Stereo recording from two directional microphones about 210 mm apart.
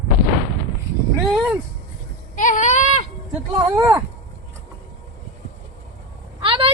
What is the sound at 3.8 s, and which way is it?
Speech, 15° right (ahead or behind).